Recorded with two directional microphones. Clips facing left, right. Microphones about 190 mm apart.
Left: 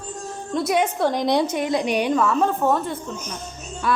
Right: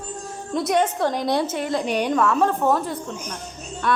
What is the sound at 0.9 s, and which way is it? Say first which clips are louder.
A woman's voice: left 2 dB; 10° left (ahead or behind).